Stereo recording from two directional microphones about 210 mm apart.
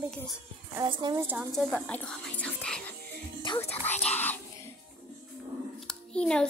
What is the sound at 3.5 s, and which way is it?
Music, 20° left (ahead or behind).